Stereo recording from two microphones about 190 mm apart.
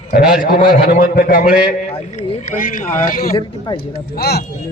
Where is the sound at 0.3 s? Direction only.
45° left (ahead or behind).